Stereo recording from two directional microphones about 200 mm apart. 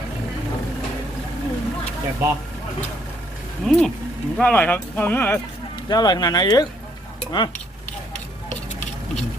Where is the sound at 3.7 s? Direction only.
Centre (ahead or behind).